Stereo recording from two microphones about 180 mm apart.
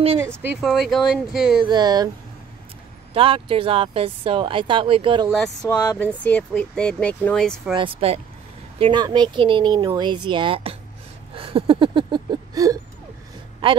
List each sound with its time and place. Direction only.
0.6 s speech: centre (ahead or behind)
1.6 s speech: 25° right (ahead or behind)
3.1 s speech: 30° right (ahead or behind)
5.3 s speech: 5° left (ahead or behind)
7.7 s speech: 30° right (ahead or behind)
11.3 s a sound: 30° right (ahead or behind)
13.6 s speech: 30° right (ahead or behind)